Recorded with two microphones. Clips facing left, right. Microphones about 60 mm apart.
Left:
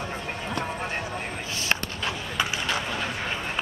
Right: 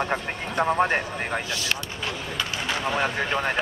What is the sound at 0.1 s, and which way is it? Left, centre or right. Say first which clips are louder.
Speech: right 3 dB; right.